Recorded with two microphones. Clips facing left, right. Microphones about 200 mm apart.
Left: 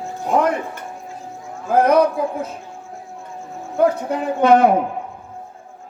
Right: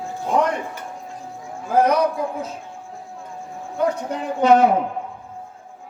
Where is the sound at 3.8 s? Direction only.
55° left (ahead or behind).